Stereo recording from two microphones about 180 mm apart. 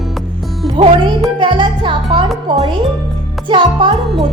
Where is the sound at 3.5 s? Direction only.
30° right (ahead or behind).